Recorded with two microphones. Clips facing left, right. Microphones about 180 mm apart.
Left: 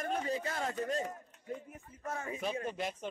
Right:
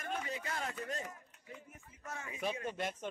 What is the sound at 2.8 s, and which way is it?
Speech, 10° left (ahead or behind).